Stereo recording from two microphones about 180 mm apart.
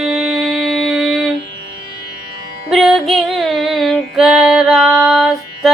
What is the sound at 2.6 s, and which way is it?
Music, centre (ahead or behind).